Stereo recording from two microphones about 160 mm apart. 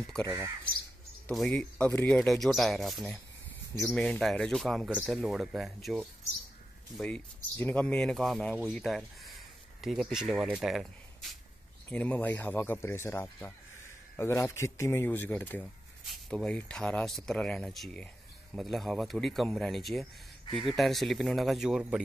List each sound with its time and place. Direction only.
0.2 s speech: 20° right (ahead or behind)
1.3 s speech: 5° left (ahead or behind)
7.5 s speech: 10° left (ahead or behind)